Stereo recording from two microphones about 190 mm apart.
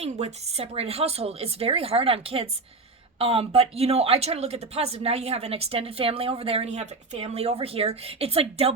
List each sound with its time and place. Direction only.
0.0 s speech: 35° right (ahead or behind)